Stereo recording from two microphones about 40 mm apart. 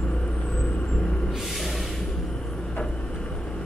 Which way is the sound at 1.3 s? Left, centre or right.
Centre.